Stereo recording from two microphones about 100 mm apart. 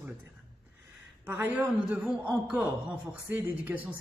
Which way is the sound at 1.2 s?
20° right (ahead or behind).